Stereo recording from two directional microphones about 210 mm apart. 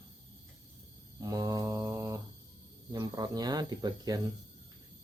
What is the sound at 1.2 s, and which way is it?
Mantra, 15° right (ahead or behind).